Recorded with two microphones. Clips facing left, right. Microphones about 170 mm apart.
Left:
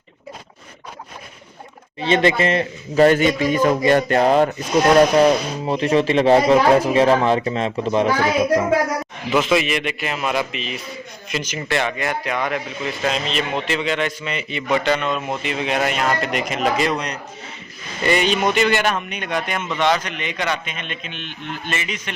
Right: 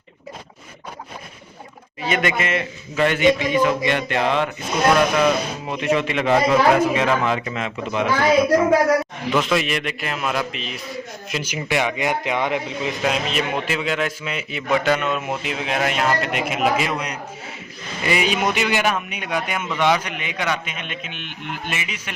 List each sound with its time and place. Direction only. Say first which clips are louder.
2.0 s speech: left 5 dB; 30° left (ahead or behind)
9.3 s a man's voice: left 3 dB; centre (ahead or behind); by 12.9 s 20° right (ahead or behind)
13.0 s a man's voice: even; 10° right (ahead or behind)